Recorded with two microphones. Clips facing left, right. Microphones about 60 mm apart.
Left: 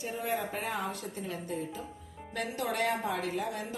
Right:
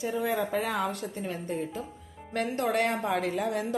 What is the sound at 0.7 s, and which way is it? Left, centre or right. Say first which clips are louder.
A woman's voice: right 5 dB; right.